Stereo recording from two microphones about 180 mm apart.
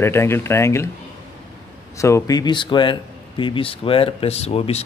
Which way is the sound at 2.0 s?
15° left (ahead or behind).